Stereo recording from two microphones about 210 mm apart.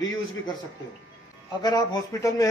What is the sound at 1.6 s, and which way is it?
Speech, 15° left (ahead or behind).